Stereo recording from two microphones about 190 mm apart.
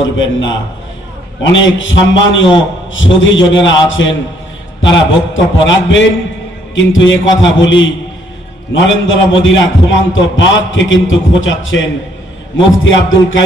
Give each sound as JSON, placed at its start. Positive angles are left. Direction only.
{"t": 0.0, "sound": "a man's voice", "side_deg": 75}